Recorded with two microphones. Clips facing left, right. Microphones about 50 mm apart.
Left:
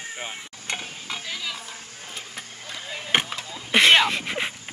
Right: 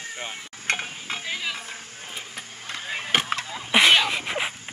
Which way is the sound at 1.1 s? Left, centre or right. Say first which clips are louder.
Right 2 dB; right.